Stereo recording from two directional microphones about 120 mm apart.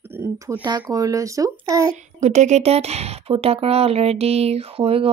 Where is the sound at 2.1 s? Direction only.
75° right (ahead or behind).